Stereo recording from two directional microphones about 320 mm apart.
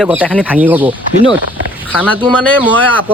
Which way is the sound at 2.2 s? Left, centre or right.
Centre.